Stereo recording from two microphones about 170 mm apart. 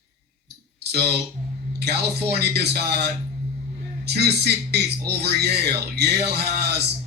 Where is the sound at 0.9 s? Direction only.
70° right (ahead or behind).